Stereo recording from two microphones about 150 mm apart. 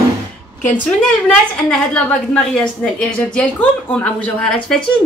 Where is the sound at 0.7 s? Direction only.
10° left (ahead or behind).